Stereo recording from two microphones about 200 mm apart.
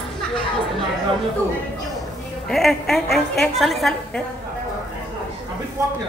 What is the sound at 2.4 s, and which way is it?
A woman's voice, centre (ahead or behind).